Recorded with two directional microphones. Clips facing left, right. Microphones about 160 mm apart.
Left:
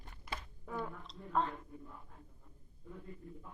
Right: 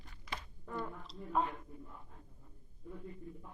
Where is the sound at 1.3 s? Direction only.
10° right (ahead or behind).